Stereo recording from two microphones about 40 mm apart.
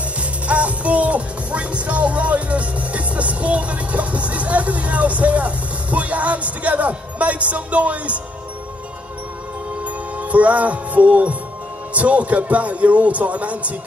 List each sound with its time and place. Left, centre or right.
0.2 s music: right
10.1 s music: right
11.9 s a man's voice: right